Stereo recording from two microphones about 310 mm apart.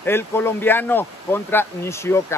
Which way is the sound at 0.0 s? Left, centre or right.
Centre.